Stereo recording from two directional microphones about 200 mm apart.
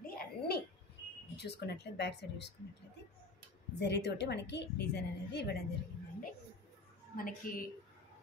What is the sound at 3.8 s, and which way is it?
A woman's voice, 60° left (ahead or behind).